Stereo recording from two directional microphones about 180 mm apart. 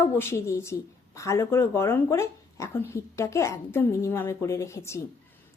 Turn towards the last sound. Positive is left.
turn(degrees=15)  # may be behind; listen again after turning